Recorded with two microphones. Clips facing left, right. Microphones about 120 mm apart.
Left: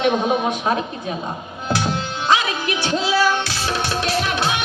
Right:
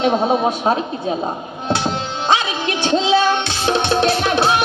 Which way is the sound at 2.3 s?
30° right (ahead or behind).